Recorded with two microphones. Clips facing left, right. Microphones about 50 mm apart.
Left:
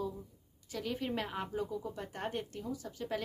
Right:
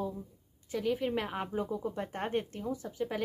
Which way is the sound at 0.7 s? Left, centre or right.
Centre.